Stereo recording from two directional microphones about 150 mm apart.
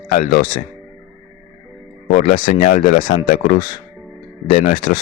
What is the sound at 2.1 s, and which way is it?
Speech, 55° left (ahead or behind).